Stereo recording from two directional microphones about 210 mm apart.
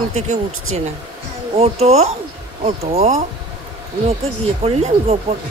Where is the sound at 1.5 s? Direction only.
30° right (ahead or behind).